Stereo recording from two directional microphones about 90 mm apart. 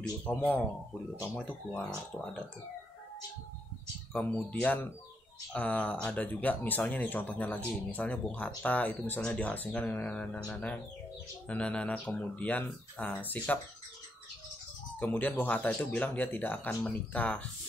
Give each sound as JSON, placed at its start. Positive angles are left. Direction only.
{"t": 0.2, "sound": "speech", "side_deg": 15}
{"t": 4.1, "sound": "speech", "side_deg": 20}
{"t": 15.0, "sound": "speech", "side_deg": 20}